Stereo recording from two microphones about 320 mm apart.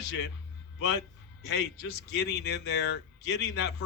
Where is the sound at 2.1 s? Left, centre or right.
Left.